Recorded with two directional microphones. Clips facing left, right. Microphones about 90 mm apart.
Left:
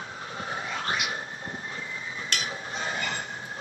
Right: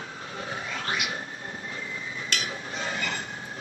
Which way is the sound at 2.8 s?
30° left (ahead or behind).